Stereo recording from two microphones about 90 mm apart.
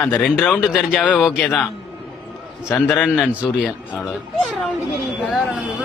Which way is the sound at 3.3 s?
15° right (ahead or behind).